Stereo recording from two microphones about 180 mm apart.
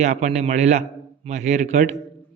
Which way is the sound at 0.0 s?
40° right (ahead or behind).